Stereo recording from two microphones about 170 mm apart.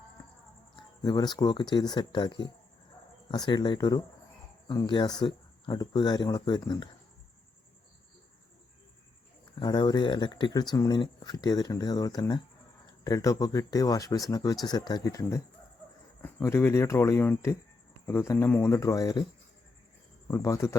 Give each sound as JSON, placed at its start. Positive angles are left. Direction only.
{"t": 1.0, "sound": "speech", "side_deg": 25}
{"t": 9.6, "sound": "speech", "side_deg": 25}
{"t": 20.2, "sound": "speech", "side_deg": 20}